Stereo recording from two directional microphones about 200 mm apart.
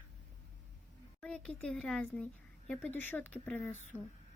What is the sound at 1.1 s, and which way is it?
Speech, 5° left (ahead or behind).